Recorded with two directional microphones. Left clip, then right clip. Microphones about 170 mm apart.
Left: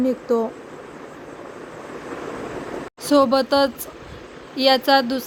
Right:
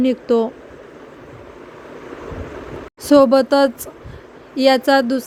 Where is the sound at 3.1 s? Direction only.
50° right (ahead or behind).